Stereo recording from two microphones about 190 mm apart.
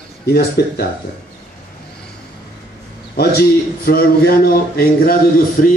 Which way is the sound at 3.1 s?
55° left (ahead or behind).